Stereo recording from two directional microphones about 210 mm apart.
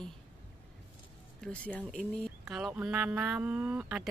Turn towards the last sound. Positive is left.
turn(degrees=-5)  # may be behind; listen again after turning